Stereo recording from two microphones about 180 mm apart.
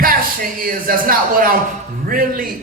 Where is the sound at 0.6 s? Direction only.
50° right (ahead or behind).